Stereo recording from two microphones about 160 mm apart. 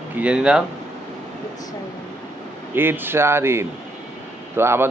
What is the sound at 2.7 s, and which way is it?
Speech, 15° right (ahead or behind).